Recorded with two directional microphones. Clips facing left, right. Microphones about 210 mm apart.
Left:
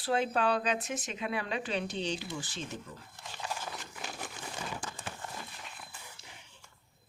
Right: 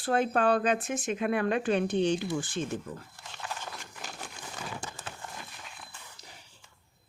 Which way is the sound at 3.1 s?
10° left (ahead or behind).